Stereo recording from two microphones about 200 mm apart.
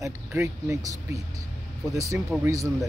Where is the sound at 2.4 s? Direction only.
15° right (ahead or behind).